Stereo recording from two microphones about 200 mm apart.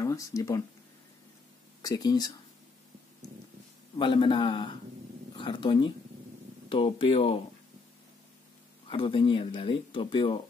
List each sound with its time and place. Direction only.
0.0 s speech: 15° left (ahead or behind)
1.8 s speech: 20° left (ahead or behind)
4.0 s speech: 25° left (ahead or behind)
8.8 s speech: 25° left (ahead or behind)